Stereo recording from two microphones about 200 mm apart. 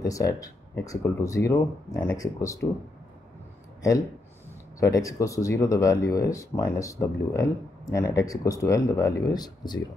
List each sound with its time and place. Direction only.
0.0 s speech: 15° left (ahead or behind)
4.7 s speech: 15° left (ahead or behind)